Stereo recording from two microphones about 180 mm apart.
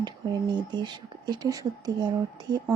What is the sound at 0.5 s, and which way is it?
Speech, 25° right (ahead or behind).